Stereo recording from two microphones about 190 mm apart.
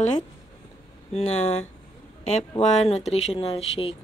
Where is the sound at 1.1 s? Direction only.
35° left (ahead or behind).